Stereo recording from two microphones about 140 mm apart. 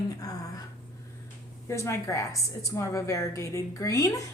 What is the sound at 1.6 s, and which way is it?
A woman's voice, 20° left (ahead or behind).